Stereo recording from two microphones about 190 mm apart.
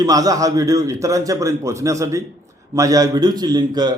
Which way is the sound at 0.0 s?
20° right (ahead or behind).